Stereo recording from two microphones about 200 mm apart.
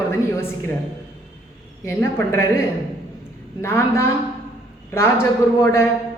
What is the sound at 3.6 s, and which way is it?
A man's voice, 10° left (ahead or behind).